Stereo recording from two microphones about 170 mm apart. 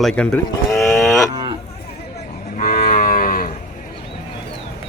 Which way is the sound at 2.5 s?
55° left (ahead or behind).